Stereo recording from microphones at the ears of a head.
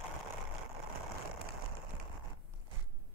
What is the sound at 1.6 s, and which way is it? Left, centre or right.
Rain on surface, right.